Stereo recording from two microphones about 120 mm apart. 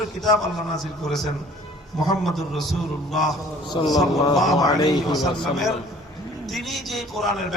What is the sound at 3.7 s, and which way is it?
Speech, 35° left (ahead or behind).